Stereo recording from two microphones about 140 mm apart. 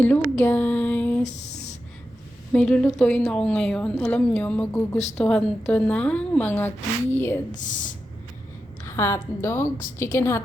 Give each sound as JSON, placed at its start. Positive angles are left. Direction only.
{"t": 0.0, "sound": "speech", "side_deg": 15}
{"t": 2.5, "sound": "speech", "side_deg": 5}
{"t": 7.5, "sound": "speech", "side_deg": 65}
{"t": 8.8, "sound": "a woman's voice", "side_deg": 20}